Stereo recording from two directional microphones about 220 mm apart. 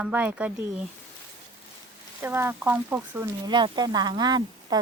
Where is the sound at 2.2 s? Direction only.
10° right (ahead or behind).